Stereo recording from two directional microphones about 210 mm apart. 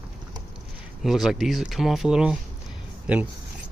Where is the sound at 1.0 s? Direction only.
Centre (ahead or behind).